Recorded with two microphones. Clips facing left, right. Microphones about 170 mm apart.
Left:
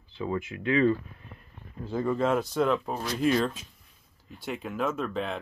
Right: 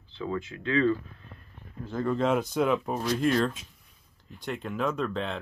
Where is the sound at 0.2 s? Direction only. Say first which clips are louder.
Left 1 dB; 20° left (ahead or behind).